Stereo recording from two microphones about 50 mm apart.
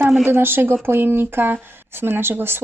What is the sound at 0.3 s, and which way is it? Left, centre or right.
A woman's voice, right.